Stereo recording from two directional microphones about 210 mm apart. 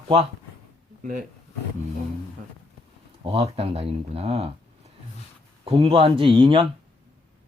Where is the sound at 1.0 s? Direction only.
40° right (ahead or behind).